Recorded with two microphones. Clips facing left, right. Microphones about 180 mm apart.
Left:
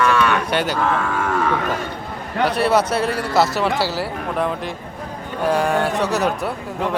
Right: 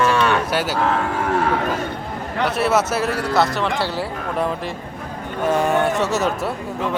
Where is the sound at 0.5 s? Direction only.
5° right (ahead or behind).